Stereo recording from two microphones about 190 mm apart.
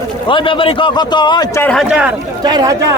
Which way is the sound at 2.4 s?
20° right (ahead or behind).